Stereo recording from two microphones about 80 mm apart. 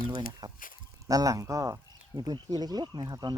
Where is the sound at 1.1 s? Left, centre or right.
Right.